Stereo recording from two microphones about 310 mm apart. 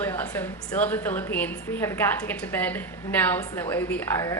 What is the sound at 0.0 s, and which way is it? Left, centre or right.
A woman's voice, centre.